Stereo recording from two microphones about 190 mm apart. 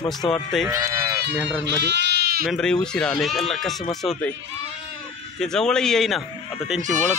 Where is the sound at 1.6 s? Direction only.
60° right (ahead or behind).